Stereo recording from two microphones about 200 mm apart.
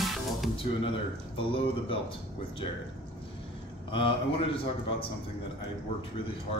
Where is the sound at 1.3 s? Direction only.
25° left (ahead or behind).